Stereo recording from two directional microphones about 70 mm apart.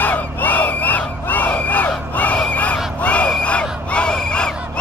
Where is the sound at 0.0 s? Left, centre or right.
Left.